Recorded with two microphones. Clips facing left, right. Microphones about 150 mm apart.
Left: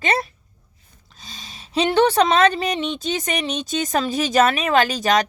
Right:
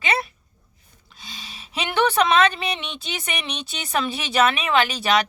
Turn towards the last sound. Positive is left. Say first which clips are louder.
# left 2 dB
turn(degrees=45)  # may be behind; listen again after turning